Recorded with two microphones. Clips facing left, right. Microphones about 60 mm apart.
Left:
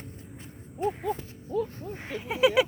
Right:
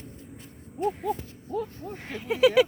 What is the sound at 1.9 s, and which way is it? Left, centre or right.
Speech, centre.